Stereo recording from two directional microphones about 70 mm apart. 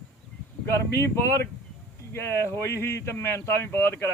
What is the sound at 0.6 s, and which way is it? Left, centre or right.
Speech, left.